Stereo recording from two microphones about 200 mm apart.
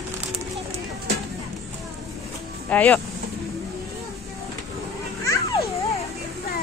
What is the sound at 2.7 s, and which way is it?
Speech, 5° left (ahead or behind).